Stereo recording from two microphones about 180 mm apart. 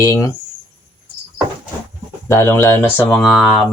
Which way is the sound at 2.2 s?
15° left (ahead or behind).